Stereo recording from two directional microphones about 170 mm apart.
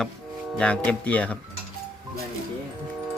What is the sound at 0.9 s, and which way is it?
Speech, 10° left (ahead or behind).